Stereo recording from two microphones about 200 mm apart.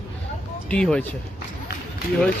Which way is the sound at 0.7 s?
5° left (ahead or behind).